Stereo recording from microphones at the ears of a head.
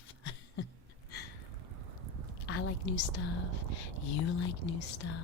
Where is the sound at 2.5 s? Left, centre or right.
Left.